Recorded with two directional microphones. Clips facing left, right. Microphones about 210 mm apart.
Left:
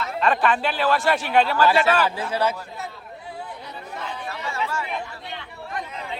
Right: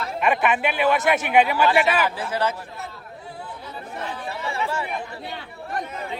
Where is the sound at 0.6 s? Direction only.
20° right (ahead or behind).